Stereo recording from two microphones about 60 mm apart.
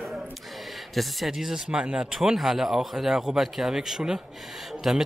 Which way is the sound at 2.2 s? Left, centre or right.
Centre.